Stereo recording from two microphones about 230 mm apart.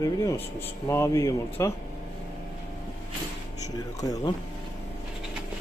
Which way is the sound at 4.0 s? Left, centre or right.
Centre.